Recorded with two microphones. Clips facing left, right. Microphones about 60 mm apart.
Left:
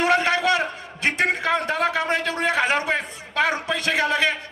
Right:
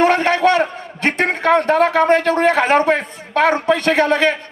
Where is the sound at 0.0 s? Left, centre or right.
Right.